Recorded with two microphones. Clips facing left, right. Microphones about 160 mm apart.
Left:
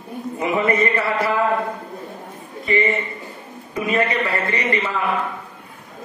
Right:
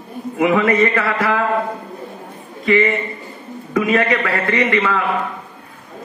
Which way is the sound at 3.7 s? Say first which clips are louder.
Right 4 dB; 85° right.